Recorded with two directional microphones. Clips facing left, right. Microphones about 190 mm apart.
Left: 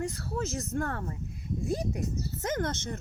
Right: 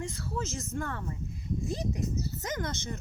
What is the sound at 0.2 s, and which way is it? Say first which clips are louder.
Speech: left 2 dB; 60° left (ahead or behind).